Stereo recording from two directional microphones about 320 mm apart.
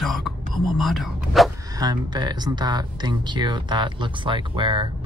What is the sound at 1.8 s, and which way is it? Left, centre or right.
Speech, centre.